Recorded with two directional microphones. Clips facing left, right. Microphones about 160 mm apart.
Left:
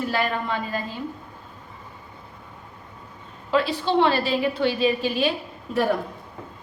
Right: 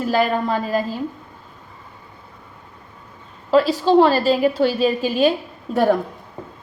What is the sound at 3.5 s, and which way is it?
A woman's voice, 40° right (ahead or behind).